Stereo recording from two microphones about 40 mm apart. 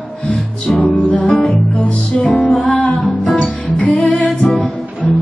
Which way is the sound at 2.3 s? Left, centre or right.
Centre.